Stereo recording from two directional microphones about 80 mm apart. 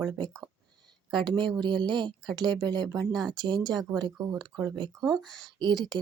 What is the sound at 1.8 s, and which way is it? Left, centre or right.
Speech, right.